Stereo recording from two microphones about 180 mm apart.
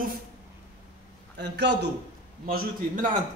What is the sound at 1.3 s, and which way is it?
Speech, 75° right (ahead or behind).